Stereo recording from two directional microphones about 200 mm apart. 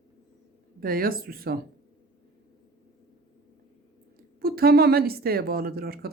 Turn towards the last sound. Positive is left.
turn(degrees=-50)  # may be behind; listen again after turning